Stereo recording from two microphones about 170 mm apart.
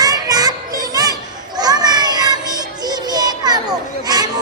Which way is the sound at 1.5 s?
25° right (ahead or behind).